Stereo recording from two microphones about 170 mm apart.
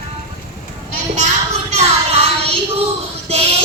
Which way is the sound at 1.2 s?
40° right (ahead or behind).